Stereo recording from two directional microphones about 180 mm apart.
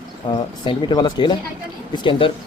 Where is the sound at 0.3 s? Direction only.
25° left (ahead or behind).